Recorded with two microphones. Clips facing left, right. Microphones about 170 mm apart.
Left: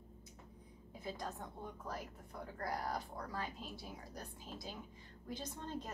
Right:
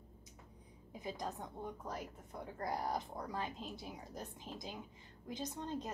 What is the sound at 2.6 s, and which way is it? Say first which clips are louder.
A woman's voice: right 2 dB; 20° right (ahead or behind).